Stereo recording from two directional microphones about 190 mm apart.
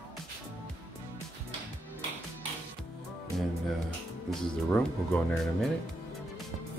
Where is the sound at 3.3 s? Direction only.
5° left (ahead or behind).